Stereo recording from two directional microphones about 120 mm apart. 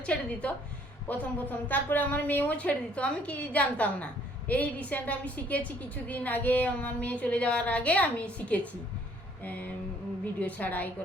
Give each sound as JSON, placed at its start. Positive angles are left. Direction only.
{"t": 0.0, "sound": "a woman's voice", "side_deg": 10}